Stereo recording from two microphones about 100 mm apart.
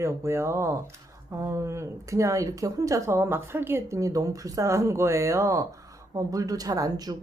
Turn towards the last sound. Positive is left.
turn(degrees=-40)  # may be behind; listen again after turning